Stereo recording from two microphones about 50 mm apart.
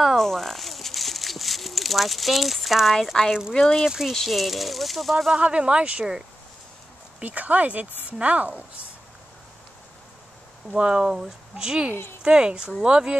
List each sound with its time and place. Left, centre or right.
0.2 s speech: centre
3.6 s speech: centre
4.1 s speech: centre
5.3 s a woman's voice: right
7.2 s a woman's voice: right
10.7 s a woman's voice: centre